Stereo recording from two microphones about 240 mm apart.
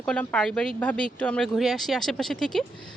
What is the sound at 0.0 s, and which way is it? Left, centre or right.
Speech, centre.